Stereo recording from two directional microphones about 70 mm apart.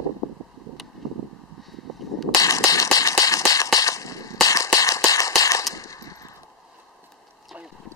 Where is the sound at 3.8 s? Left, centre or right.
Left.